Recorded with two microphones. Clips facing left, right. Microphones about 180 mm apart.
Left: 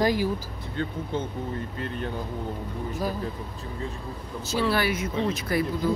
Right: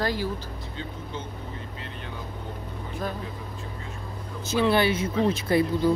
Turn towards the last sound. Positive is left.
turn(degrees=-30)  # may be behind; listen again after turning